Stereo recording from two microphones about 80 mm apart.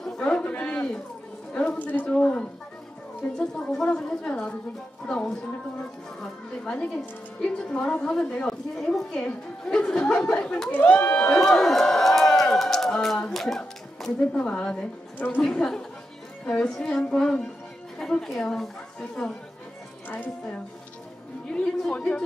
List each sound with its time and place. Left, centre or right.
0.0 s a sound: centre
1.5 s a woman's voice: centre
6.6 s a woman's voice: centre
15.1 s speech: left
15.5 s a woman's voice: centre
20.1 s a woman's voice: left